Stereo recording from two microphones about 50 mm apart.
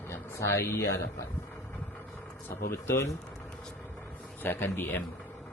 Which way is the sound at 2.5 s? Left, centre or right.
Left.